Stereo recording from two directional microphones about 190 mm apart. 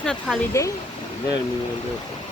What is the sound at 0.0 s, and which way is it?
Speech, 5° left (ahead or behind).